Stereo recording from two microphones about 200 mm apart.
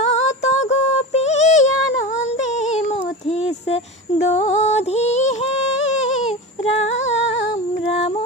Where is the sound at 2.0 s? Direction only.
35° left (ahead or behind).